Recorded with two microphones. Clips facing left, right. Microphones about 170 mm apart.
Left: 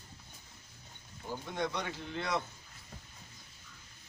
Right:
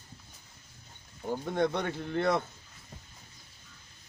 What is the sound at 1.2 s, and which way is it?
Speech, 50° right (ahead or behind).